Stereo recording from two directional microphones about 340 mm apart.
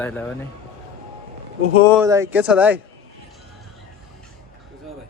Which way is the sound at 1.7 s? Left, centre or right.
Centre.